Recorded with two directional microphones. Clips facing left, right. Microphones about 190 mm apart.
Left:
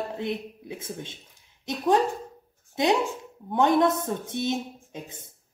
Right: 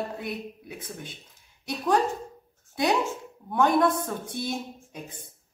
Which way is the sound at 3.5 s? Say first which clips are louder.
Left 1 dB; 20° left (ahead or behind).